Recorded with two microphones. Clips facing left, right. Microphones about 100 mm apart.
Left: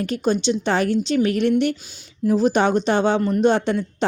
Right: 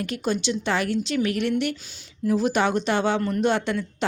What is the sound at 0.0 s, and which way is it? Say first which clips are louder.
Speech: left 5 dB; 30° left (ahead or behind).